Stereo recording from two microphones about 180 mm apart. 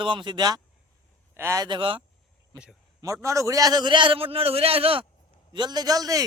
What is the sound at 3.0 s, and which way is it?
Speech, 15° right (ahead or behind).